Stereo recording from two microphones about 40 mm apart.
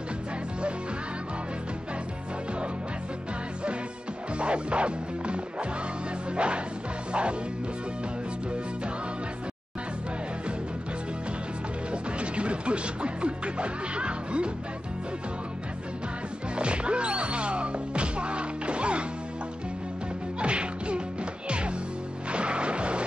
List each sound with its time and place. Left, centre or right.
4.4 s music: right
11.9 s music: right
16.5 s music: right
20.3 s music: right